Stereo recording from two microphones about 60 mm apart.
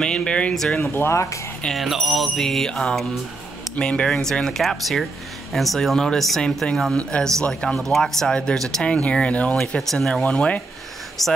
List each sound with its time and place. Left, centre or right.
0.0 s speech: centre
0.9 s speech: left
1.8 s music: centre
3.7 s speech: centre
4.1 s music: centre
6.4 s speech: centre
9.8 s speech: centre
11.2 s music: centre